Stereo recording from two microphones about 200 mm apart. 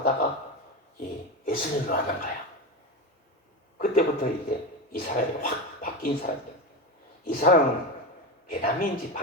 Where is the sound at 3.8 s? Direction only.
45° left (ahead or behind).